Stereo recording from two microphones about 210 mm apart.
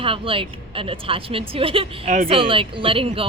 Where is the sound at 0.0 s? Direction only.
25° right (ahead or behind).